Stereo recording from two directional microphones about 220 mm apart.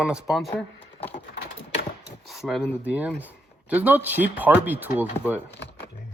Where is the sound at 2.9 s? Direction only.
5° right (ahead or behind).